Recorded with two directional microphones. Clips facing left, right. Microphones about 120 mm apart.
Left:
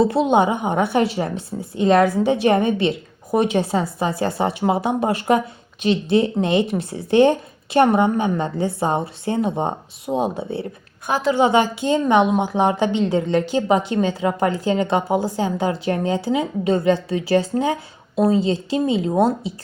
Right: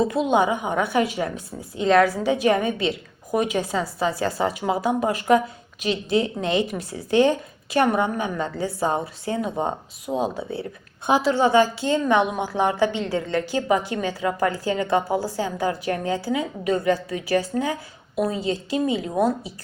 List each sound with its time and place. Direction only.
0.0 s a woman's voice: 30° left (ahead or behind)